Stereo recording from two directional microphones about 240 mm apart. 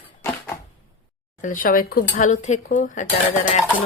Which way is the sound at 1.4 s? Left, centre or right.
Left.